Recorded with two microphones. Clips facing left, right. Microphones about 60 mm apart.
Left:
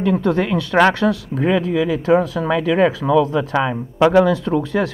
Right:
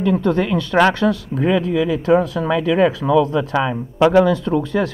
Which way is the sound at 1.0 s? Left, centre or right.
Left.